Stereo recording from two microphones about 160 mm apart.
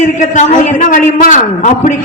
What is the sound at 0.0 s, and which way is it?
A man's voice, 50° left (ahead or behind).